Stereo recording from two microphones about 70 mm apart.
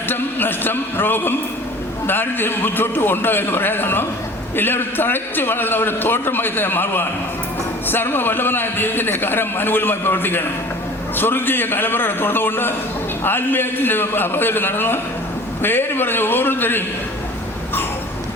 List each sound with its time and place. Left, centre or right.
0.1 s a man's voice: left